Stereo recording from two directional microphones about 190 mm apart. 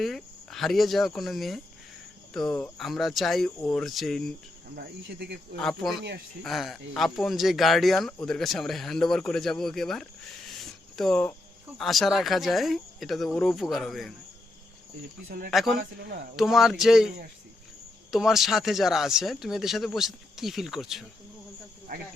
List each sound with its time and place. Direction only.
0.0 s speech: centre (ahead or behind)
4.7 s speech: 55° right (ahead or behind)
5.5 s speech: centre (ahead or behind)
10.6 s a sound: centre (ahead or behind)
11.8 s speech: centre (ahead or behind)
15.4 s speech: centre (ahead or behind)
15.8 s speech: 55° right (ahead or behind)
16.3 s speech: centre (ahead or behind)
18.1 s speech: centre (ahead or behind)
21.9 s speech: 50° right (ahead or behind)